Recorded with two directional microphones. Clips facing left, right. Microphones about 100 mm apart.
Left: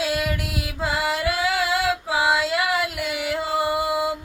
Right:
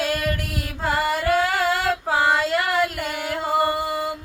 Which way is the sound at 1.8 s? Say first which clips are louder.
Right 1 dB; 50° right (ahead or behind).